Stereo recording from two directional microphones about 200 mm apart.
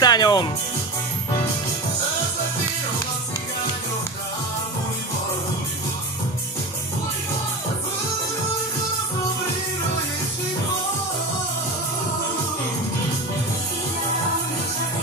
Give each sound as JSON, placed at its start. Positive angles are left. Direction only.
{"t": 0.0, "sound": "music", "side_deg": 20}